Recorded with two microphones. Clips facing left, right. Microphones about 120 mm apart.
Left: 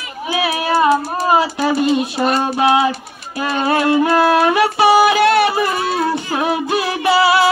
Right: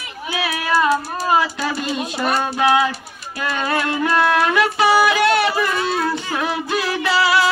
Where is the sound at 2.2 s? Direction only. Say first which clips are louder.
Left 3 dB; 25° left (ahead or behind).